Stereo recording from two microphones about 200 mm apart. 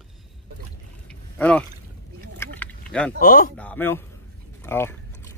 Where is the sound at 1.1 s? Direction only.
5° left (ahead or behind).